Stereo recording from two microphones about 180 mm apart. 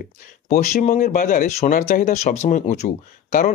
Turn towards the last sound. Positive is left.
turn(degrees=45)  # may be behind; listen again after turning